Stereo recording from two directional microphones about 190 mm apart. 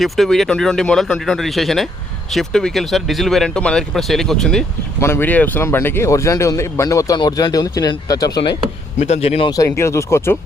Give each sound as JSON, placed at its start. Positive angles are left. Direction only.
{"t": 0.0, "sound": "speech", "side_deg": 0}
{"t": 4.9, "sound": "speech", "side_deg": 15}
{"t": 9.0, "sound": "speech", "side_deg": 35}
{"t": 9.5, "sound": "speech", "side_deg": 15}